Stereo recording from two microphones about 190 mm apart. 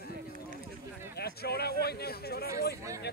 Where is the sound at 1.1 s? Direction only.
55° left (ahead or behind).